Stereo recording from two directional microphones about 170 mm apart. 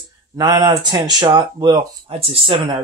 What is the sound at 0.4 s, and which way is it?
Speech, 25° right (ahead or behind).